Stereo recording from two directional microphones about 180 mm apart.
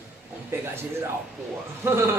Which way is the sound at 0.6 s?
15° right (ahead or behind).